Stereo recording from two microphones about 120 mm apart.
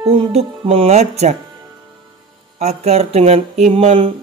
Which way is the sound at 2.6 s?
60° right (ahead or behind).